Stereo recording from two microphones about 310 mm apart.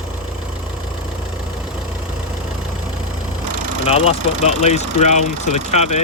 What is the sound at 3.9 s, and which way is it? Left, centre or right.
Speech, centre.